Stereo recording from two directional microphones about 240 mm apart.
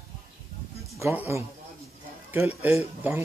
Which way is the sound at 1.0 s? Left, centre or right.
Centre.